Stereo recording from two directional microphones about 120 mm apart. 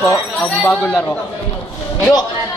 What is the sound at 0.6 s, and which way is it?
Speech, 10° left (ahead or behind).